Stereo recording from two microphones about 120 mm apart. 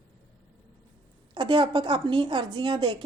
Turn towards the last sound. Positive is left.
turn(degrees=-45)  # may be behind; listen again after turning